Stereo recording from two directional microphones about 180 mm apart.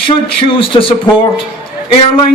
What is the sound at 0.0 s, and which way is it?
Speech, 30° left (ahead or behind).